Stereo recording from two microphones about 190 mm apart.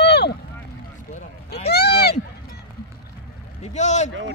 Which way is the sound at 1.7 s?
60° left (ahead or behind).